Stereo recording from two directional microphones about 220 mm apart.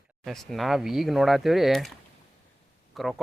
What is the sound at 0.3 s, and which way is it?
Speech, centre (ahead or behind).